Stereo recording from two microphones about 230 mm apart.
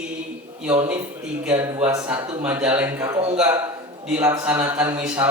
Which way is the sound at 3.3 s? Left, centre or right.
Centre.